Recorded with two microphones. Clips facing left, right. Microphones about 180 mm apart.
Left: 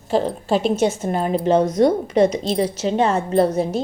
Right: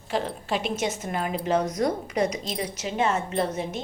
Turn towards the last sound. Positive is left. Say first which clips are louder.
# left 10 dB
turn(degrees=35)  # may be behind; listen again after turning